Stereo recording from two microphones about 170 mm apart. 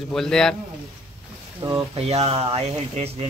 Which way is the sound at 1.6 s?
25° right (ahead or behind).